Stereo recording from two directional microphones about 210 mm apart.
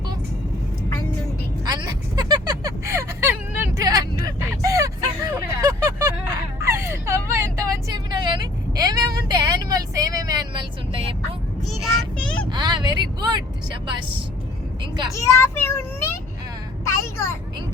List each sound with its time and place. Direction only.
1.6 s a sound: 20° right (ahead or behind)
3.8 s hubbub: 15° right (ahead or behind)
6.6 s vehicle: 15° right (ahead or behind)
11.7 s child singing: centre (ahead or behind)
12.5 s a sound: 20° right (ahead or behind)
15.1 s child singing: 15° left (ahead or behind)
16.9 s vehicle: 10° left (ahead or behind)